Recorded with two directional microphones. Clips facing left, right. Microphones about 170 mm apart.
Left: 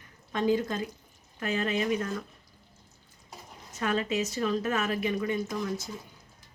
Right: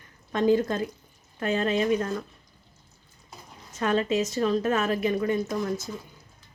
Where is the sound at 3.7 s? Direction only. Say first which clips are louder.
Right 4 dB; 35° right (ahead or behind).